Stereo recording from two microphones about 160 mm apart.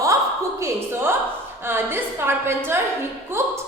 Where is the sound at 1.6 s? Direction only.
15° right (ahead or behind).